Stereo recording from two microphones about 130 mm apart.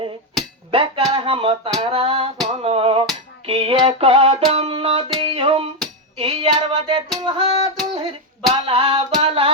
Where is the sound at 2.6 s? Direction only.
50° right (ahead or behind).